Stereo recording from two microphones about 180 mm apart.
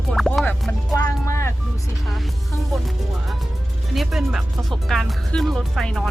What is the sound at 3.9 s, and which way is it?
Speech, centre (ahead or behind).